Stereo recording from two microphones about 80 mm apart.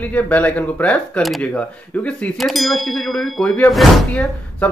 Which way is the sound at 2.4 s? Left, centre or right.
Centre.